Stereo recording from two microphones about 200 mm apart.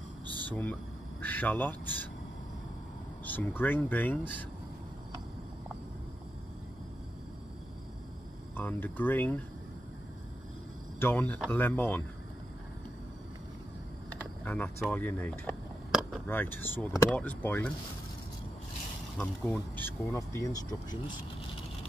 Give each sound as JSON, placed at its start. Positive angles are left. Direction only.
{"t": 0.5, "sound": "speech", "side_deg": 5}
{"t": 3.3, "sound": "speech", "side_deg": 10}
{"t": 8.5, "sound": "speech", "side_deg": 10}
{"t": 11.0, "sound": "speech", "side_deg": 10}
{"t": 14.4, "sound": "a sound", "side_deg": 10}
{"t": 16.3, "sound": "speech", "side_deg": 10}
{"t": 19.1, "sound": "speech", "side_deg": 5}